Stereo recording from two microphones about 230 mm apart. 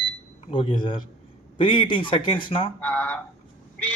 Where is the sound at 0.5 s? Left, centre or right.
Left.